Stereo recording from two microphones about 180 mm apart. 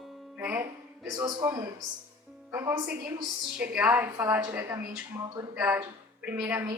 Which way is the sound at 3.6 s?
10° right (ahead or behind).